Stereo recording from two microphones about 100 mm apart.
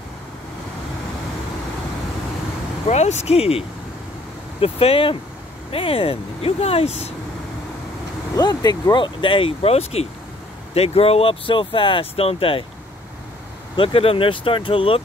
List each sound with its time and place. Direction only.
2.9 s speech: 90° left
8.4 s speech: 45° left (ahead or behind); by 12.6 s 65° left (ahead or behind)
13.7 s speech: 65° left (ahead or behind)